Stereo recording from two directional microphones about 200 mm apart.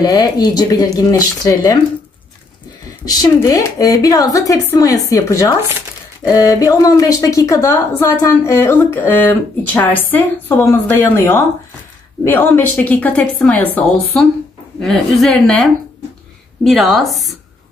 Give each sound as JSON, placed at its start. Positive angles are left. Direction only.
{"t": 0.0, "sound": "speech", "side_deg": 20}
{"t": 3.1, "sound": "a woman's voice", "side_deg": 20}
{"t": 14.8, "sound": "a woman's voice", "side_deg": 0}